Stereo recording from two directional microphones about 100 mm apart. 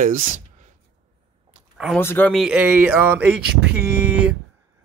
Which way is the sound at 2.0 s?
25° left (ahead or behind).